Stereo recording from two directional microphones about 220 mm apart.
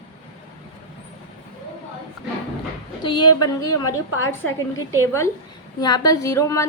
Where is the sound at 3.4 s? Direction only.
15° left (ahead or behind).